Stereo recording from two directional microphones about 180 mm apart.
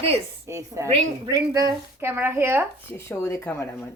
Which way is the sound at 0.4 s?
15° right (ahead or behind).